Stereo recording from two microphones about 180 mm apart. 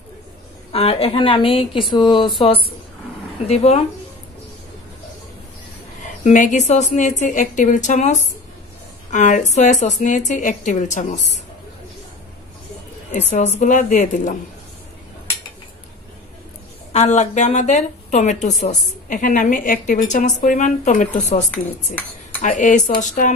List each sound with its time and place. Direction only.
0.7 s speech: 35° left (ahead or behind)
6.2 s a woman's voice: 45° left (ahead or behind)
13.1 s a woman's voice: 40° left (ahead or behind)
16.9 s a woman's voice: 40° left (ahead or behind)
21.5 s speech: 10° left (ahead or behind)
22.4 s a woman's voice: 45° left (ahead or behind)